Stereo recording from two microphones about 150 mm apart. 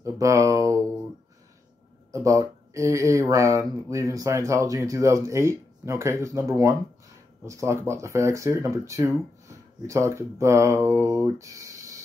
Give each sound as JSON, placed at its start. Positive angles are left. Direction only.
{"t": 0.0, "sound": "speech", "side_deg": -20}
{"t": 2.1, "sound": "speech", "side_deg": -20}